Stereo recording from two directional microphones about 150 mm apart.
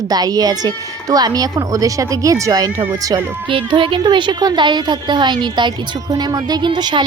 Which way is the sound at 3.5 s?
35° right (ahead or behind).